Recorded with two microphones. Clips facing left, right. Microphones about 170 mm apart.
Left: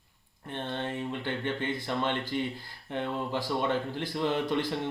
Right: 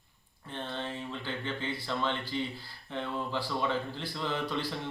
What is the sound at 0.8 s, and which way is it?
A man's voice, 55° left (ahead or behind).